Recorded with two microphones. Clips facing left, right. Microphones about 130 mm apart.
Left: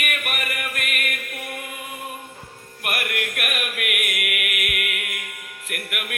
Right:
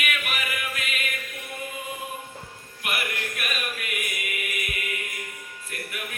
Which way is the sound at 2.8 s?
60° left (ahead or behind).